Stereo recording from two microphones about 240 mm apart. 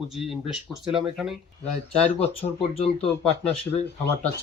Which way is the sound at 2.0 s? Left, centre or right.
Left.